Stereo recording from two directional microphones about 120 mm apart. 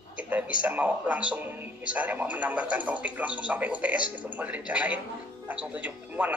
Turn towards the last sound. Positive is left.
turn(degrees=-10)  # may be behind; listen again after turning